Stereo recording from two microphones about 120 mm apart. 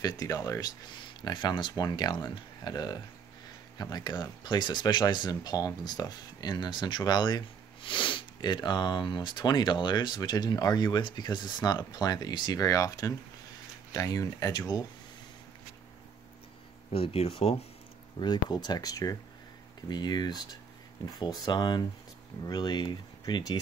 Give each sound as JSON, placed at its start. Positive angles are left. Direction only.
{"t": 0.0, "sound": "speech", "side_deg": 30}
{"t": 16.9, "sound": "speech", "side_deg": 55}
{"t": 18.2, "sound": "speech", "side_deg": 35}